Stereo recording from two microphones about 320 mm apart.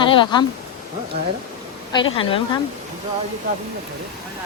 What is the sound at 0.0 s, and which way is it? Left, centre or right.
Speech, centre.